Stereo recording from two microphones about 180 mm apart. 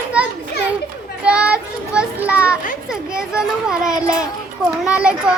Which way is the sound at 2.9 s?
5° right (ahead or behind).